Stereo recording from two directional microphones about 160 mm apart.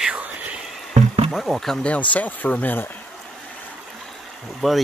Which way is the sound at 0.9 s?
50° right (ahead or behind).